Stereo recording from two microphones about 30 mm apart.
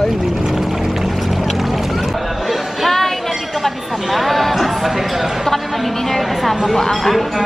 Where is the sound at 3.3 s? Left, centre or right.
Centre.